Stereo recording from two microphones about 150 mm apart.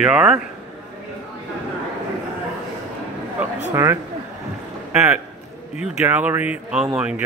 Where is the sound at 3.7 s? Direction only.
20° right (ahead or behind).